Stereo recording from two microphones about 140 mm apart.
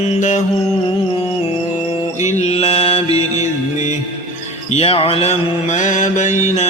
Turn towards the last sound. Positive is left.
turn(degrees=60)  # may be behind; listen again after turning